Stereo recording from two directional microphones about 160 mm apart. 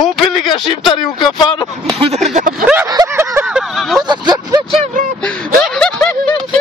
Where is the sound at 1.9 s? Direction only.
35° right (ahead or behind).